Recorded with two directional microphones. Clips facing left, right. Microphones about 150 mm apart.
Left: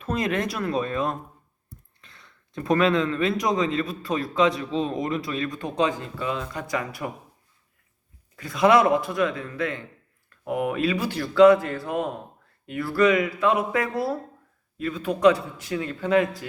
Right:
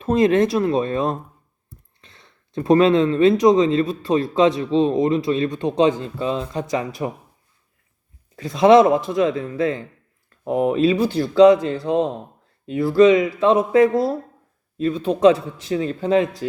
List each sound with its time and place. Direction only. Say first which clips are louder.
0.0 s a man's voice: right 10 dB; 30° right (ahead or behind)
8.4 s a man's voice: right 6 dB; 25° right (ahead or behind)